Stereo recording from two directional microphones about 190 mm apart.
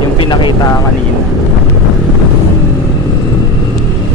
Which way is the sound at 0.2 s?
25° left (ahead or behind).